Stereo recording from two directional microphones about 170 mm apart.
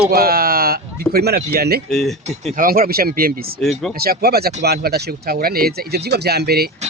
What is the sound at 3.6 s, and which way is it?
Speech, centre (ahead or behind).